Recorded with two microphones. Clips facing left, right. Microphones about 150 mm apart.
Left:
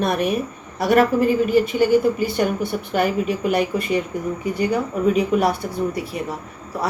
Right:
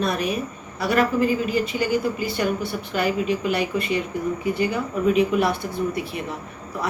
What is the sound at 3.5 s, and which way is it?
A woman's voice, 45° left (ahead or behind).